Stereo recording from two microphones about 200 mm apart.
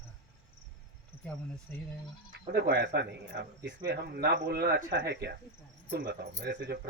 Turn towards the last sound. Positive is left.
turn(degrees=-60)  # may be behind; listen again after turning